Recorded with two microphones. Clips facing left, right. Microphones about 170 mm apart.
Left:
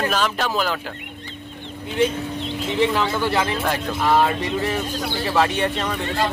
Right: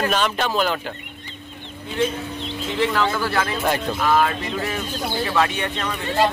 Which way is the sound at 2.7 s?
15° left (ahead or behind).